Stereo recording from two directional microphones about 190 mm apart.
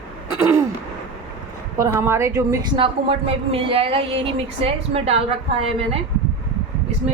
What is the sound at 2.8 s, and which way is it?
Speech, 30° right (ahead or behind).